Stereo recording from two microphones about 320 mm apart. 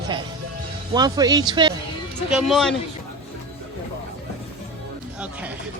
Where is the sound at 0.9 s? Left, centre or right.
Centre.